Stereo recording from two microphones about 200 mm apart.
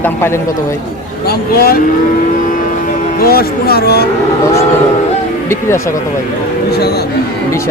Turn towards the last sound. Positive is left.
turn(degrees=15)  # may be behind; listen again after turning